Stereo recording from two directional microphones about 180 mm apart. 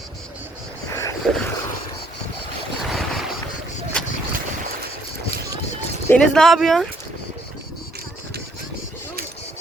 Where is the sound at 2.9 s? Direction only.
Centre (ahead or behind).